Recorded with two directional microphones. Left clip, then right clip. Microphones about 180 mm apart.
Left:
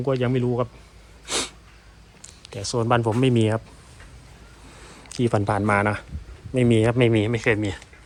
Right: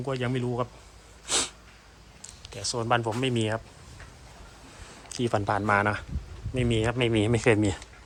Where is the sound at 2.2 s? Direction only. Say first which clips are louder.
Left 2 dB; 10° right (ahead or behind).